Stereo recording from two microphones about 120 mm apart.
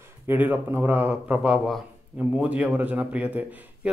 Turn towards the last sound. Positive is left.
turn(degrees=-10)  # may be behind; listen again after turning